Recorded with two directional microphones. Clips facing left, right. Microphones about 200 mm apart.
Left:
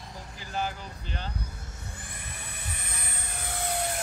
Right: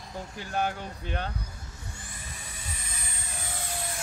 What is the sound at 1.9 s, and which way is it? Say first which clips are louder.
Vehicle: left 1 dB; 55° left (ahead or behind).